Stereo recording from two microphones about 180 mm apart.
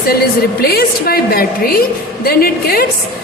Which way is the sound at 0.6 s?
60° left (ahead or behind).